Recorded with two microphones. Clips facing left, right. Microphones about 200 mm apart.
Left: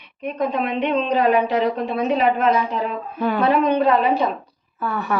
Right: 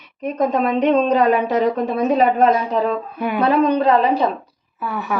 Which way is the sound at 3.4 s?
35° right (ahead or behind).